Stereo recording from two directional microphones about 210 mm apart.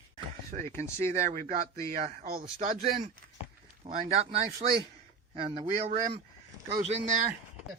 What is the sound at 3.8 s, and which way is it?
A man's voice, 30° right (ahead or behind).